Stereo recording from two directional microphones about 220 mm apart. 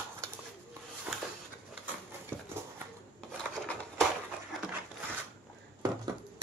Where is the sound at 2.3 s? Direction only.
10° right (ahead or behind).